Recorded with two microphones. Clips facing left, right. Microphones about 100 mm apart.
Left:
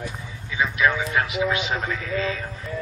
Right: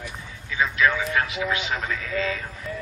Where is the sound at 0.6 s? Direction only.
15° left (ahead or behind).